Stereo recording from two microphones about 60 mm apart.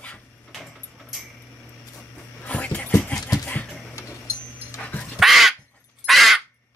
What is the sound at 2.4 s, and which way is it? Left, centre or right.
Dog, left.